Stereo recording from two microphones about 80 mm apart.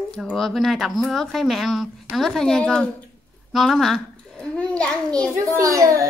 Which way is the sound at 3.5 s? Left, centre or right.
Centre.